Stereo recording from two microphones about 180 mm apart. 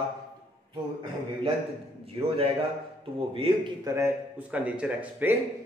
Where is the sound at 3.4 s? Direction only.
25° right (ahead or behind).